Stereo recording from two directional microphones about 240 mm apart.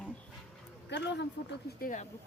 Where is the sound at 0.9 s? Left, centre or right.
Left.